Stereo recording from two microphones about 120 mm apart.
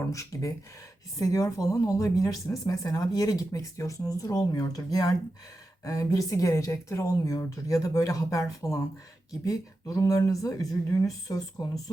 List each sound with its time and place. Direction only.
0.0 s speech: 25° left (ahead or behind)